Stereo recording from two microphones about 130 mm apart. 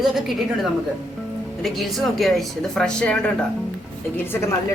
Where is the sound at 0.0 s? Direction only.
Centre (ahead or behind); by 4.4 s 15° left (ahead or behind).